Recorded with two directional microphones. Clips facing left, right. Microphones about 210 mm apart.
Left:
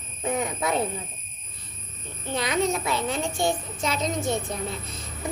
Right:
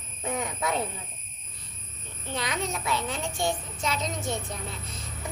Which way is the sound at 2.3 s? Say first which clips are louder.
Left 7 dB; 15° left (ahead or behind).